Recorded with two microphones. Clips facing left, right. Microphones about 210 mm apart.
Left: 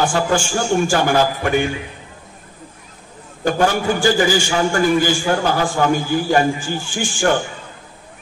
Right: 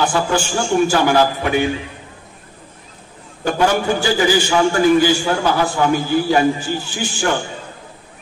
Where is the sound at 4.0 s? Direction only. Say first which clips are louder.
Even; 50° left (ahead or behind).